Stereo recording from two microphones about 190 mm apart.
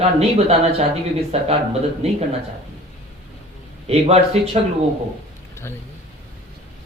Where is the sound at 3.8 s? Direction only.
30° right (ahead or behind).